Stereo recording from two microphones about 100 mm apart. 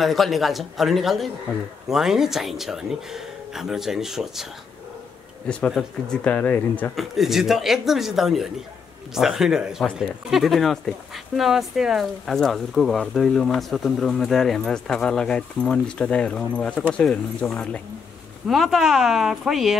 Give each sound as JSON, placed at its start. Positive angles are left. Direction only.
{"t": 0.0, "sound": "speech", "side_deg": 0}
{"t": 5.7, "sound": "speech", "side_deg": 0}
{"t": 6.2, "sound": "speech", "side_deg": 15}
{"t": 7.0, "sound": "speech", "side_deg": 0}
{"t": 18.5, "sound": "speech", "side_deg": 0}